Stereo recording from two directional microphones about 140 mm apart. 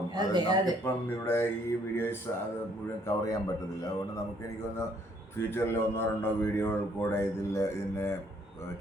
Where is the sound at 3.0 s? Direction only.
25° left (ahead or behind).